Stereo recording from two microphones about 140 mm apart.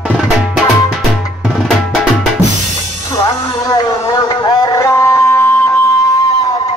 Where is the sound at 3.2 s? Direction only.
25° left (ahead or behind).